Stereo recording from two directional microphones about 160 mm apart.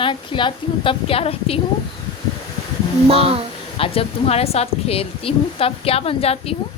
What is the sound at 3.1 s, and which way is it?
Speech, 40° right (ahead or behind).